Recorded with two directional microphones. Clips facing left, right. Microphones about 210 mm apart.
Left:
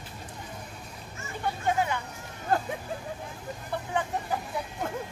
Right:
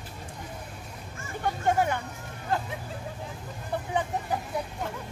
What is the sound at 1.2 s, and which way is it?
Speech, 50° right (ahead or behind).